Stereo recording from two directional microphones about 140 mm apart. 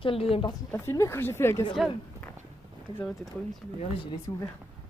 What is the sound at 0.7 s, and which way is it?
Speech, 20° left (ahead or behind).